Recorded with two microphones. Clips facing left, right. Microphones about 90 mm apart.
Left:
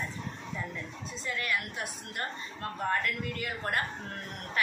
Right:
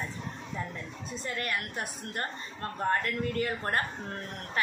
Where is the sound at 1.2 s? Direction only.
45° right (ahead or behind).